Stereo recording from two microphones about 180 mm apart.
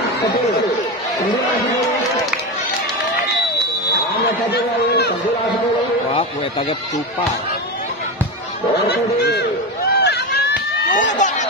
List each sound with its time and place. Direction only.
4.5 s speech: 65° left (ahead or behind)
8.8 s a man's voice: 65° left (ahead or behind)
9.9 s run: 65° left (ahead or behind)
10.9 s run: 45° left (ahead or behind)